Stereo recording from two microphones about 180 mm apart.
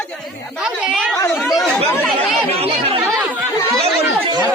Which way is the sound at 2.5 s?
35° right (ahead or behind).